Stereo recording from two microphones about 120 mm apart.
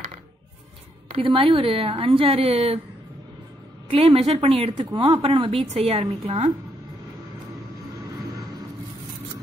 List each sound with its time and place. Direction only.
1.1 s a woman's voice: 50° right (ahead or behind)
3.9 s a woman's voice: 55° right (ahead or behind)
6.2 s speech: 70° right (ahead or behind)